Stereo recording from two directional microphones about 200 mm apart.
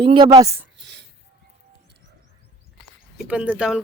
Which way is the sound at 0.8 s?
60° right (ahead or behind).